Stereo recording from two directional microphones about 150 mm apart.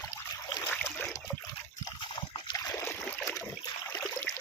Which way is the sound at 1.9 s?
35° left (ahead or behind).